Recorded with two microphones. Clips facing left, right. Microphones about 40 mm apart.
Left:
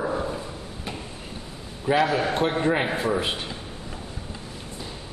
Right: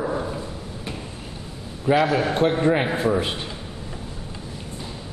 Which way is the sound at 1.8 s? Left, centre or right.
Centre.